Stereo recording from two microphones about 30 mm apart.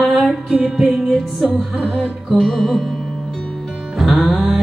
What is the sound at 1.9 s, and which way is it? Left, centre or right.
Music, centre.